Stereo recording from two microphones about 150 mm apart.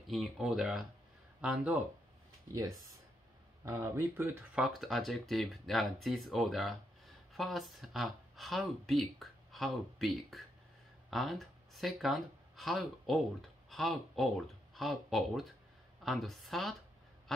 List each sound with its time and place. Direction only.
0.1 s speech: centre (ahead or behind)
2.4 s speech: 20° right (ahead or behind)
4.6 s speech: centre (ahead or behind)